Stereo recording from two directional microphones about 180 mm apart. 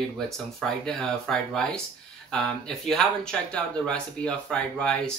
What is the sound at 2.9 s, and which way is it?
Speech, 5° left (ahead or behind).